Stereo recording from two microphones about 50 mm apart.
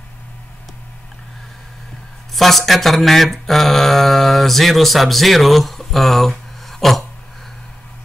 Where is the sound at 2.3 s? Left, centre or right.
Centre.